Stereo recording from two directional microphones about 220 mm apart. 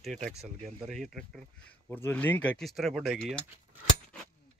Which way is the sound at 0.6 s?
Centre (ahead or behind).